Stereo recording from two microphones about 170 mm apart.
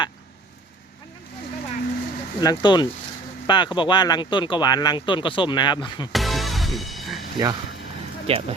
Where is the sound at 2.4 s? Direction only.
25° left (ahead or behind).